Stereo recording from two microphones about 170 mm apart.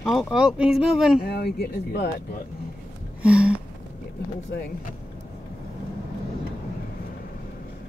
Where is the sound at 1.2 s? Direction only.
70° left (ahead or behind).